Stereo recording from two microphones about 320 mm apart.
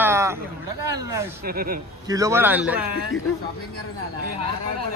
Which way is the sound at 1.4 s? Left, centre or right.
Right.